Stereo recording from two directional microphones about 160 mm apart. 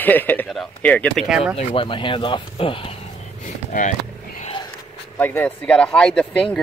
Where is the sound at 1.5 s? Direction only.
35° left (ahead or behind).